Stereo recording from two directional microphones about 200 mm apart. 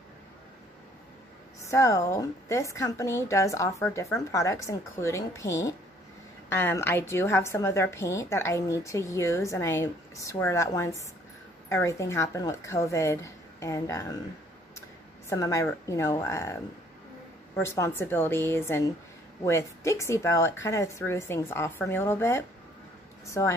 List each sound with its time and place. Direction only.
1.7 s a woman's voice: 15° left (ahead or behind)
15.2 s a woman's voice: 15° left (ahead or behind)
17.6 s a woman's voice: 15° left (ahead or behind)